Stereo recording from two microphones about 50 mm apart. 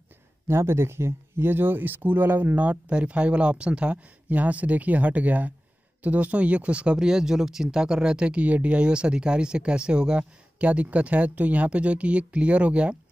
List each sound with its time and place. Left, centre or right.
0.5 s speech: right